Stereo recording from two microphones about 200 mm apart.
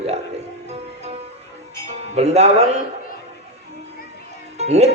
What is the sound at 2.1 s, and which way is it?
Speech, 35° right (ahead or behind).